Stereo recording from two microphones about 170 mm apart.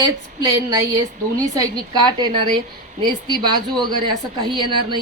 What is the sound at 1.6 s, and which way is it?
A woman's voice, 25° right (ahead or behind).